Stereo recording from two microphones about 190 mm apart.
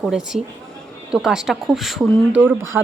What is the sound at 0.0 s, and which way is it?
A woman's voice, 5° right (ahead or behind).